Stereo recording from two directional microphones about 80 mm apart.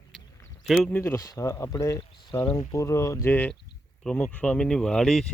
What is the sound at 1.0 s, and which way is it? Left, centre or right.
Speech, left.